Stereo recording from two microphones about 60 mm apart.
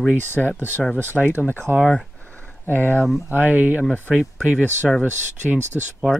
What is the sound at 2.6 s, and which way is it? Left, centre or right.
Speech, left.